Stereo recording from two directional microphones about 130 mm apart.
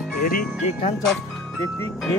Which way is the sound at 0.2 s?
90° left.